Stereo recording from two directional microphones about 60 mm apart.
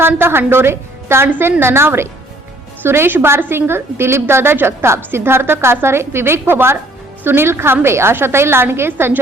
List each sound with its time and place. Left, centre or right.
0.0 s a woman's voice: right
1.3 s a woman's voice: right